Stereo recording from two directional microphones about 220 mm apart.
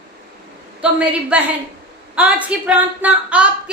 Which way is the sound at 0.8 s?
5° right (ahead or behind).